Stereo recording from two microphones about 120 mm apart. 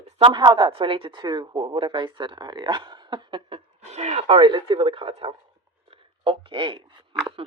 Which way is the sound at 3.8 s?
65° right (ahead or behind).